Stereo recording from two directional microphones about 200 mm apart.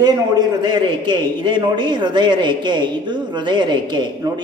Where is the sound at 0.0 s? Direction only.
20° right (ahead or behind).